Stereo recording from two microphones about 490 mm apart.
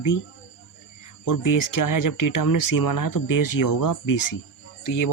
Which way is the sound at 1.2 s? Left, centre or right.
Left.